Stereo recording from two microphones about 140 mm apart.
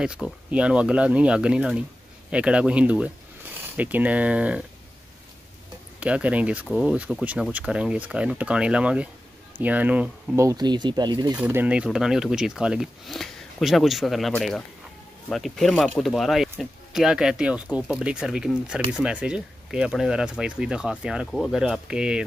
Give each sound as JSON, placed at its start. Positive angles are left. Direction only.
{"t": 0.0, "sound": "speech", "side_deg": -5}
{"t": 5.9, "sound": "speech", "side_deg": -10}
{"t": 10.4, "sound": "speech", "side_deg": -30}
{"t": 11.3, "sound": "speech", "side_deg": -10}